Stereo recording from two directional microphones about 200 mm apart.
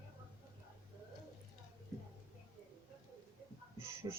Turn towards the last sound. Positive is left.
turn(degrees=-15)  # may be behind; listen again after turning